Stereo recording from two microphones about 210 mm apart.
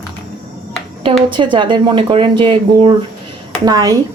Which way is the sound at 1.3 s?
20° right (ahead or behind).